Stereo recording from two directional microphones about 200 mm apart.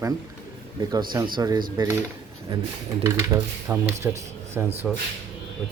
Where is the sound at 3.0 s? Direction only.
10° right (ahead or behind).